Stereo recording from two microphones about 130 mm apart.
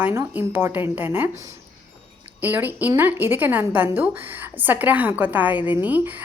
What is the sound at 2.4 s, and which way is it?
A woman's voice, 15° right (ahead or behind).